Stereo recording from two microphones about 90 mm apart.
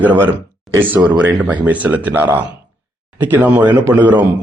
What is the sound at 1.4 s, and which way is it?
A man's voice, 15° right (ahead or behind).